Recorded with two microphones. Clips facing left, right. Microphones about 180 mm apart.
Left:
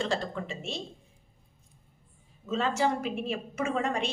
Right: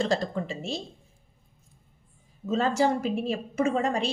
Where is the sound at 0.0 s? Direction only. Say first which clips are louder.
Right 4 dB; 40° right (ahead or behind).